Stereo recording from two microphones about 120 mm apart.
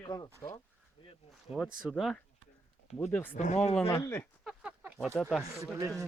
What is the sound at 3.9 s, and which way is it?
Speech, 20° left (ahead or behind).